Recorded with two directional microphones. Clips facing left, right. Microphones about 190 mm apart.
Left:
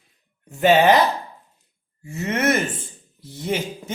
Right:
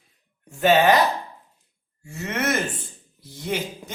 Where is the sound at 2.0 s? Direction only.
20° left (ahead or behind).